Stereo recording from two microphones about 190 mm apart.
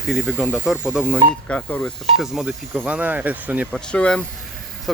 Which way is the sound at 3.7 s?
5° left (ahead or behind).